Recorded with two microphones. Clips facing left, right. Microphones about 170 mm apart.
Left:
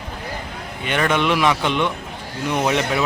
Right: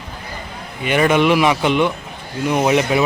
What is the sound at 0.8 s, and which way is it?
A man's voice, 5° right (ahead or behind).